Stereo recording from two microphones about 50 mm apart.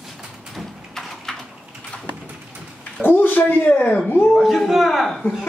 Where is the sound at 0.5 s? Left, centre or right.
Centre.